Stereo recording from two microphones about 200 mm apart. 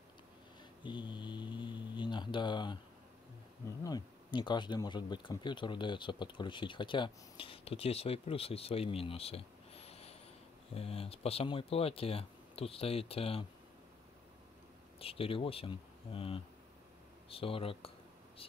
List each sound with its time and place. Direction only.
0.8 s mantra: 25° left (ahead or behind)
3.8 s speech: 20° left (ahead or behind)
15.0 s speech: 30° left (ahead or behind)